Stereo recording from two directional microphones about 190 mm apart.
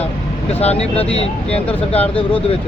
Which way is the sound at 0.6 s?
35° left (ahead or behind).